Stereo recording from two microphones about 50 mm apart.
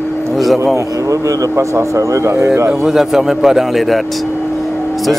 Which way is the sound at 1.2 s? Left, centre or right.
Right.